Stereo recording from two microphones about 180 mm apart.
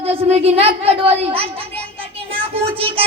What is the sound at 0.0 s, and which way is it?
A man's voice, 35° right (ahead or behind).